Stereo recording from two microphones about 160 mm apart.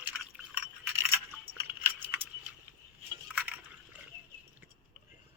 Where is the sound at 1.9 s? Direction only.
10° right (ahead or behind).